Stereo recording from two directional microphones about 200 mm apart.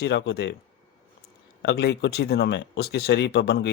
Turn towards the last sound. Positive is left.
turn(degrees=55)  # may be behind; listen again after turning